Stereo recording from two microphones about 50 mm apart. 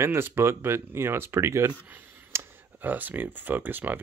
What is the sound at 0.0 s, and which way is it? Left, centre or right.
Speech, right.